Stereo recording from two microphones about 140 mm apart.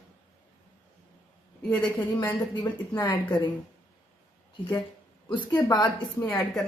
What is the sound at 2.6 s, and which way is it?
Speech, 35° left (ahead or behind).